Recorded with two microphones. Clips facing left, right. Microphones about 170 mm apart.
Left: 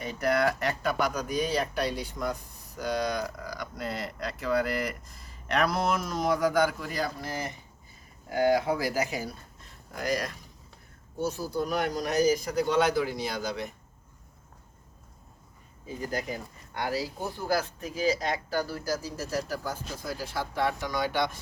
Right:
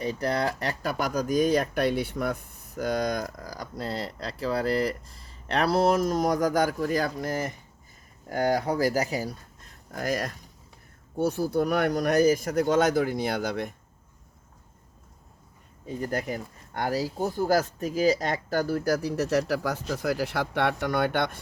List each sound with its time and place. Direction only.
0.0 s speech: 35° right (ahead or behind)
9.9 s speech: 50° right (ahead or behind)
11.2 s speech: 60° right (ahead or behind)
16.0 s speech: 55° right (ahead or behind)